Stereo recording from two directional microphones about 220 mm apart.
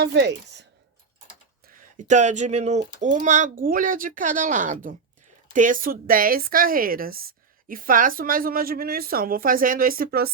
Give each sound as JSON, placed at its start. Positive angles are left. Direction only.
{"t": 0.0, "sound": "speech", "side_deg": -50}
{"t": 1.6, "sound": "a woman's voice", "side_deg": -35}